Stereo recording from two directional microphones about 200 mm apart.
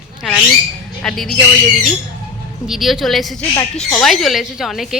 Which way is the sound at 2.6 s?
Centre (ahead or behind).